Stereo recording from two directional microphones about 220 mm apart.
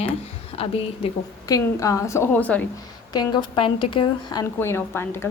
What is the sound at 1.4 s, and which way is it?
A woman's voice, 15° left (ahead or behind).